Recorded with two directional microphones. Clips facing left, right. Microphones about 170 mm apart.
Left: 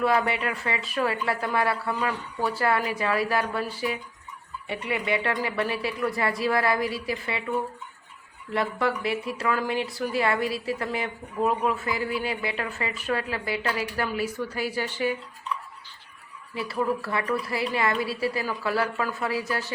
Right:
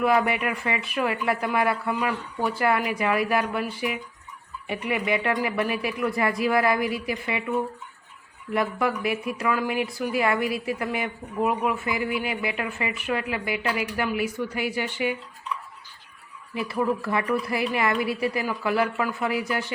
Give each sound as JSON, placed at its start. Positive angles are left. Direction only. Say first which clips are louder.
{"t": 0.0, "sound": "speech", "louder": "right 2 dB", "side_deg": -15}
{"t": 8.5, "sound": "speech", "louder": "right 1 dB", "side_deg": -15}
{"t": 16.6, "sound": "a woman's voice", "louder": "right 2 dB", "side_deg": -20}